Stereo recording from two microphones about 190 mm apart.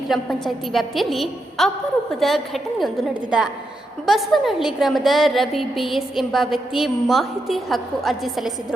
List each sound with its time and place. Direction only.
0.1 s a woman's voice: centre (ahead or behind)